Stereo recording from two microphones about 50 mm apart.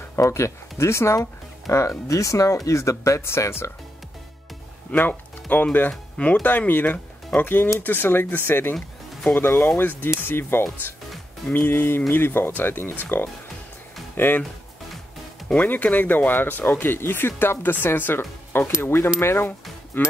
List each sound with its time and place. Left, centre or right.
0.1 s speech: left
1.7 s speech: left
4.9 s speech: left
6.7 s speech: left
15.4 s speech: left
18.8 s speech: left
19.9 s speech: left